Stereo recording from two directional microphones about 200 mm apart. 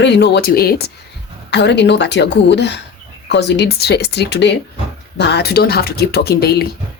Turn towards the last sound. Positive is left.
turn(degrees=55)  # may be behind; listen again after turning